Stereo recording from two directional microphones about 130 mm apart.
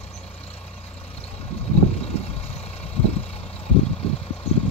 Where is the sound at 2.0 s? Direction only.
50° left (ahead or behind).